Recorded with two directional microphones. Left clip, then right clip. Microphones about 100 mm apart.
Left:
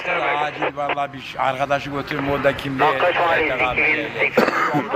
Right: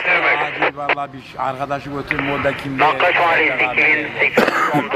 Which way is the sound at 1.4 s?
15° left (ahead or behind).